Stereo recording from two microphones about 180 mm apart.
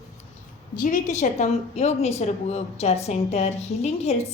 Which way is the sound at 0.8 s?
45° left (ahead or behind).